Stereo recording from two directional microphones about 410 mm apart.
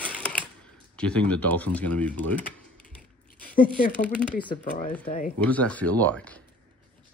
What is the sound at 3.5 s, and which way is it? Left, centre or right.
Speech, centre.